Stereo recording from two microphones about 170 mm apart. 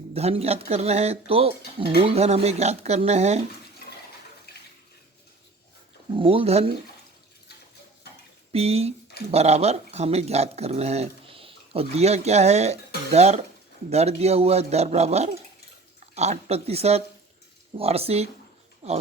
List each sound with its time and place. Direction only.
0.1 s speech: 35° right (ahead or behind)
6.1 s speech: 35° right (ahead or behind)
8.5 s speech: 35° right (ahead or behind)